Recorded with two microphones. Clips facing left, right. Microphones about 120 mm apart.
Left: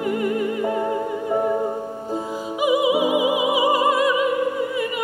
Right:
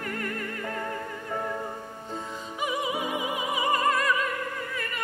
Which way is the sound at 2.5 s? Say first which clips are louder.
Left 11 dB; 10° left (ahead or behind).